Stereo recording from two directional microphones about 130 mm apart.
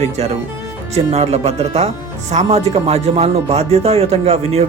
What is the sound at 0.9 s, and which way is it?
Speech, 55° right (ahead or behind).